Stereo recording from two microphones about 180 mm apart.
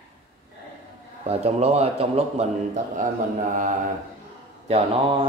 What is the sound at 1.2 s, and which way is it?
A man's voice, 35° right (ahead or behind).